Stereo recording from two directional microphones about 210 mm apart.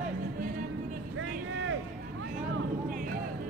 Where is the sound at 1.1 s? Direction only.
65° right (ahead or behind).